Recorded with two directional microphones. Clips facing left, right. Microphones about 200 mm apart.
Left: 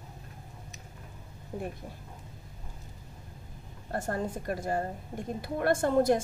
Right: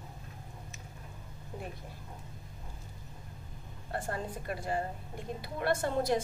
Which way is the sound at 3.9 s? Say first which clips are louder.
Left 4 dB; 45° left (ahead or behind).